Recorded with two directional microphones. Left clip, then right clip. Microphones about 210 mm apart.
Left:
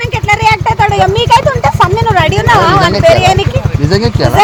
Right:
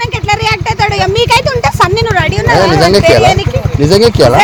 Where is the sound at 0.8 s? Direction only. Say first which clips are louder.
Left 1 dB; 35° right (ahead or behind).